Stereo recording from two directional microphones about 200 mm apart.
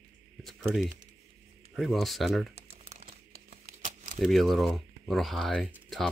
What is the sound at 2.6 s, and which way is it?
Crumpling, 35° right (ahead or behind).